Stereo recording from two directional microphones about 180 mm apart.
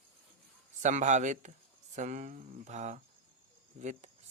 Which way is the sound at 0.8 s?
40° right (ahead or behind).